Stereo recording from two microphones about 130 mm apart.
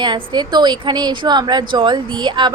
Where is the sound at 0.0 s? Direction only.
35° right (ahead or behind).